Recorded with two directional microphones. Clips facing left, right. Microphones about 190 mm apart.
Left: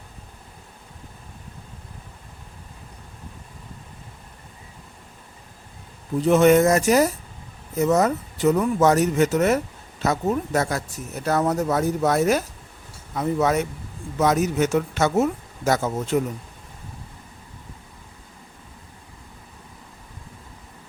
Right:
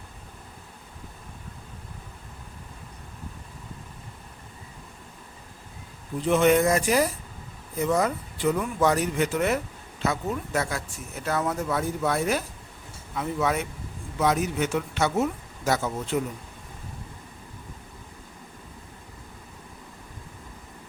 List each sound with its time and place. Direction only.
6.2 s speech: 45° left (ahead or behind)